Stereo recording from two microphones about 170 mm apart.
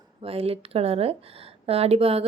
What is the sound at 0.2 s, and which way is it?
Speech, 35° right (ahead or behind).